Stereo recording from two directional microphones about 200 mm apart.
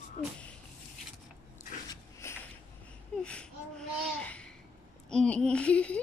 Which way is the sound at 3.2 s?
5° left (ahead or behind).